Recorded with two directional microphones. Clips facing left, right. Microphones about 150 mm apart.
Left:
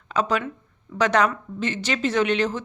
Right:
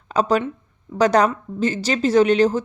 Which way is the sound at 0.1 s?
35° right (ahead or behind).